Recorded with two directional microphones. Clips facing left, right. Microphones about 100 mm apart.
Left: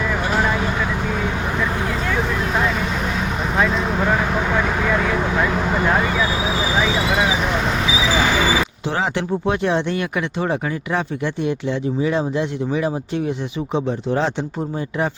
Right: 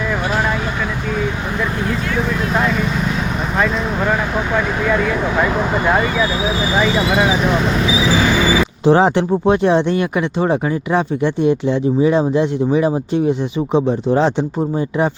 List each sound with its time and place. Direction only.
8.8 s speech: 35° right (ahead or behind)